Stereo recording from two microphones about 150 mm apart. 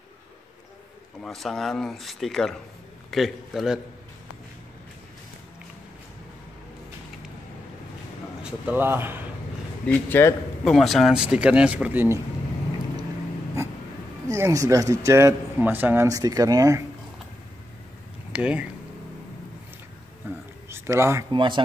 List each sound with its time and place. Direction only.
1.2 s speech: centre (ahead or behind)
8.4 s speech: 10° right (ahead or behind)
9.8 s a man's voice: 15° left (ahead or behind)
10.6 s speech: centre (ahead or behind)
14.2 s speech: 20° right (ahead or behind)
18.3 s speech: 10° right (ahead or behind)
20.2 s a sound: 15° right (ahead or behind)
20.6 s speech: 15° right (ahead or behind)
21.3 s speech: 30° right (ahead or behind)